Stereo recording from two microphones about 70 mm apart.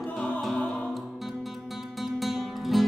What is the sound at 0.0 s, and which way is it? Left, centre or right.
Music, centre.